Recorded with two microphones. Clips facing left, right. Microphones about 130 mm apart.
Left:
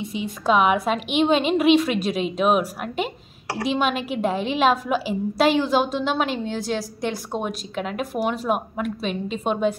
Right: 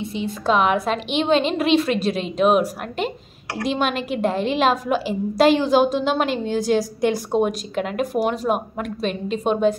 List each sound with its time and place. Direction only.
0.1 s a woman's voice: 10° left (ahead or behind)
3.6 s a woman's voice: 5° left (ahead or behind)